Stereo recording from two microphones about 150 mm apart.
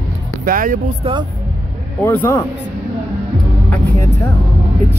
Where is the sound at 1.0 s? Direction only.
35° right (ahead or behind).